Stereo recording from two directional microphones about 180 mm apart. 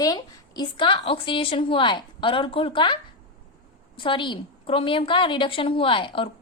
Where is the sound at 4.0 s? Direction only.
25° left (ahead or behind).